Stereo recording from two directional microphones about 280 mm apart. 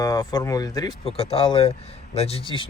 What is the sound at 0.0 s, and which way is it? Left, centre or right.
Speech, centre.